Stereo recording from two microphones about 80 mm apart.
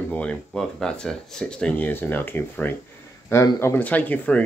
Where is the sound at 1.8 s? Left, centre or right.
Left.